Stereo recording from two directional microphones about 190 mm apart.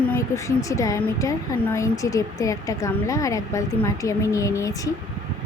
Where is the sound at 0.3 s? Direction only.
15° left (ahead or behind).